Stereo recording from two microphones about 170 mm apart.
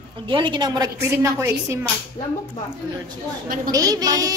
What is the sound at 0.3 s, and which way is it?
A woman's voice, 30° right (ahead or behind).